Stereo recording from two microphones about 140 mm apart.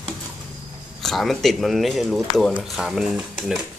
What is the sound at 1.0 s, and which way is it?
Speech, centre (ahead or behind).